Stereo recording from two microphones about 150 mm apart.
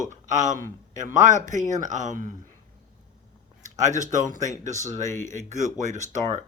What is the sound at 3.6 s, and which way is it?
Speech, 55° right (ahead or behind).